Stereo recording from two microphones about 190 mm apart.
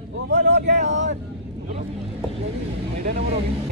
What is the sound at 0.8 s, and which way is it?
Speech, 70° right (ahead or behind).